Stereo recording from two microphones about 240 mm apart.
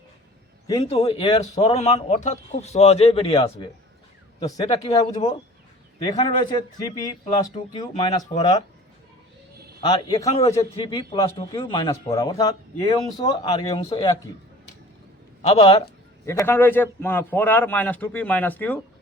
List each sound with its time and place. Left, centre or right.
0.7 s a man's voice: left
9.8 s a man's voice: centre
15.4 s a man's voice: left
16.2 s a man's voice: centre